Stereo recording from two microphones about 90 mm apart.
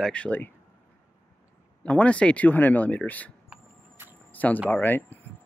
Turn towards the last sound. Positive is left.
turn(degrees=20)  # may be behind; listen again after turning